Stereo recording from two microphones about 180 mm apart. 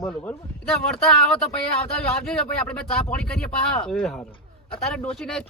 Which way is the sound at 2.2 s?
5° left (ahead or behind).